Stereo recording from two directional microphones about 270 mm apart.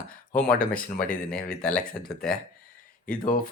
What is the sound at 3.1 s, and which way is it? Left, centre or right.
Speech, left.